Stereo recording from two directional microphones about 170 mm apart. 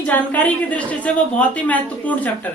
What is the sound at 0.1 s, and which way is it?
A woman's voice, 10° left (ahead or behind).